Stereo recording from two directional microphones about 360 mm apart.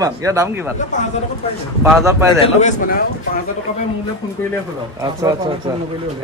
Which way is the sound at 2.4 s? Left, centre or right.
Centre.